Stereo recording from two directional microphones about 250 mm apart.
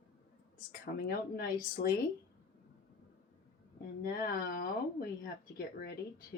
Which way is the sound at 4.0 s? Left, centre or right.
Left.